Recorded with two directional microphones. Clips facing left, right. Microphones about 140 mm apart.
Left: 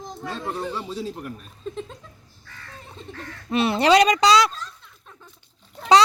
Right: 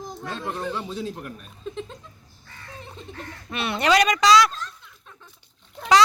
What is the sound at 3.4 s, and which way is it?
Speech, 30° left (ahead or behind).